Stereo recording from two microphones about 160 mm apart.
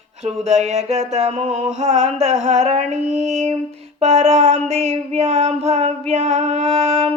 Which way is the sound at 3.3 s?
45° right (ahead or behind).